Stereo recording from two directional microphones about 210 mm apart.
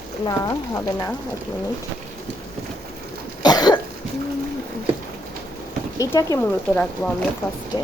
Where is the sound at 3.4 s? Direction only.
20° left (ahead or behind).